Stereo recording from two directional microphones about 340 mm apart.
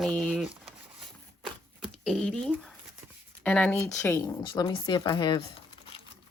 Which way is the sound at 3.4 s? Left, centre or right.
Centre.